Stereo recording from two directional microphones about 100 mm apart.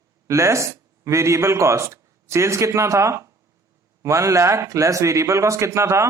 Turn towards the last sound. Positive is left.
turn(degrees=-30)  # may be behind; listen again after turning